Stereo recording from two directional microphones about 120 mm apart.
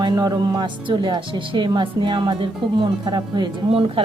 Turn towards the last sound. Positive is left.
turn(degrees=-45)  # may be behind; listen again after turning